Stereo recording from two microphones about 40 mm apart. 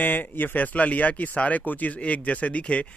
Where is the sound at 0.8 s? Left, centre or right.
Left.